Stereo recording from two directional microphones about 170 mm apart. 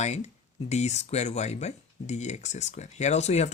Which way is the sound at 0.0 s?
40° left (ahead or behind).